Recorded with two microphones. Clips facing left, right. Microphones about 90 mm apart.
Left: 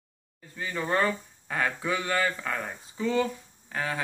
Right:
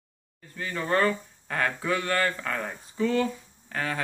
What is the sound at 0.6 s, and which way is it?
Speech, 15° left (ahead or behind).